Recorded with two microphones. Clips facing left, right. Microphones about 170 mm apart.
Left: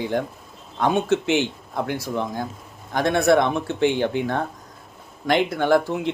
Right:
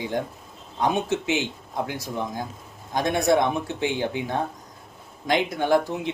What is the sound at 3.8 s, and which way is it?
Speech, 60° left (ahead or behind).